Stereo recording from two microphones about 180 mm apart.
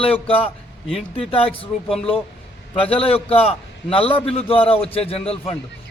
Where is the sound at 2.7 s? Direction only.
30° left (ahead or behind).